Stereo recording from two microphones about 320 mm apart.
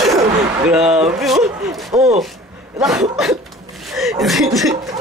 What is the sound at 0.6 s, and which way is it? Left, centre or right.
Speech, centre.